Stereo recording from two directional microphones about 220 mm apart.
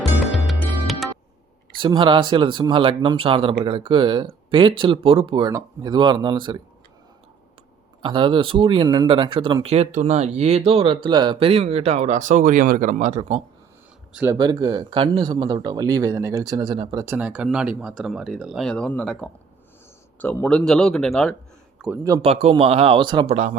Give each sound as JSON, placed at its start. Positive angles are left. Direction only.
{"t": 0.3, "sound": "music", "side_deg": 0}
{"t": 1.8, "sound": "speech", "side_deg": -20}
{"t": 8.0, "sound": "speech", "side_deg": -20}
{"t": 14.1, "sound": "speech", "side_deg": -5}
{"t": 14.3, "sound": "a man's voice", "side_deg": -20}
{"t": 22.3, "sound": "speech", "side_deg": -25}